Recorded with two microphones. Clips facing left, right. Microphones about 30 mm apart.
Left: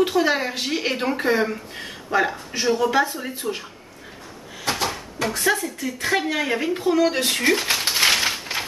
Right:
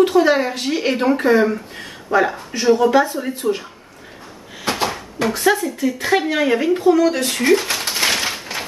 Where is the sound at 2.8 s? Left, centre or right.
Right.